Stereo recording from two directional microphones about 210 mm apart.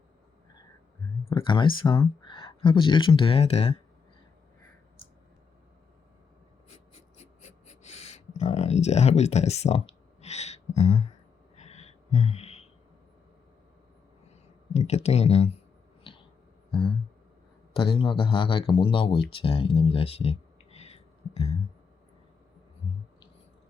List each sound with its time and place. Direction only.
1.3 s speech: 20° left (ahead or behind)
7.7 s a sound: 30° left (ahead or behind)
14.7 s speech: 30° left (ahead or behind)
17.7 s speech: 25° left (ahead or behind)